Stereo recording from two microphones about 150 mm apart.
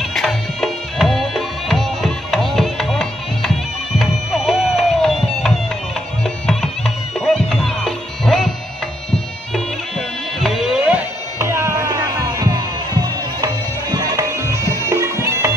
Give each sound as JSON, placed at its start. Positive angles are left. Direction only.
{"t": 0.0, "sound": "music", "side_deg": 5}
{"t": 9.5, "sound": "music", "side_deg": 0}
{"t": 11.3, "sound": "music", "side_deg": -15}